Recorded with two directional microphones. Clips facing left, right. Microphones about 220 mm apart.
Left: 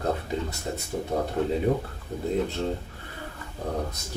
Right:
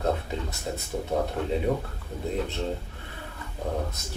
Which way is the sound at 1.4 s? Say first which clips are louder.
Left 4 dB; 25° left (ahead or behind).